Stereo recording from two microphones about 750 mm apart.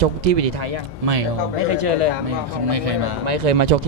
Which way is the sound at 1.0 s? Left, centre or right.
Right.